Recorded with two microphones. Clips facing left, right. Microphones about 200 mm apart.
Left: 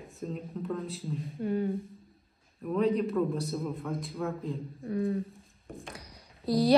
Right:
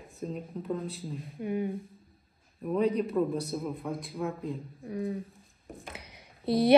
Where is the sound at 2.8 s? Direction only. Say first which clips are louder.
Even; centre (ahead or behind).